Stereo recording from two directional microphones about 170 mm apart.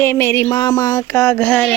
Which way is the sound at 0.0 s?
15° left (ahead or behind).